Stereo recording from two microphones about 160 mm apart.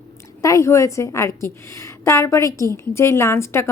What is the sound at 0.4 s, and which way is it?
A woman's voice, 20° left (ahead or behind).